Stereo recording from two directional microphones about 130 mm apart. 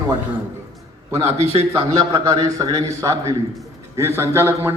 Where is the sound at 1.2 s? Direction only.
55° right (ahead or behind).